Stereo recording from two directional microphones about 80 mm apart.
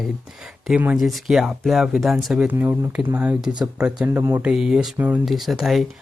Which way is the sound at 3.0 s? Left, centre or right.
Right.